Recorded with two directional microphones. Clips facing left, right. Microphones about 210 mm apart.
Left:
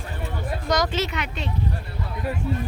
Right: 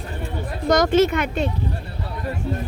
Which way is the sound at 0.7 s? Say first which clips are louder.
Right 9 dB; 50° right (ahead or behind).